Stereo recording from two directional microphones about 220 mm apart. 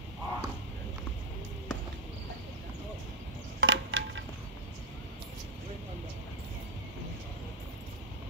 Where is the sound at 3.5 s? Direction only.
55° right (ahead or behind).